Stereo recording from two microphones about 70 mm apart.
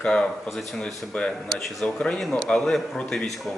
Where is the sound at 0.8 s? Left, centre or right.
Centre.